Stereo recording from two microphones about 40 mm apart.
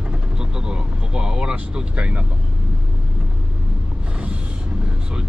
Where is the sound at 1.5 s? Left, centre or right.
Right.